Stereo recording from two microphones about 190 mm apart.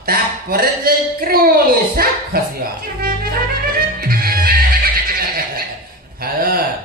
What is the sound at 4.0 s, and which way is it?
Music, 50° right (ahead or behind).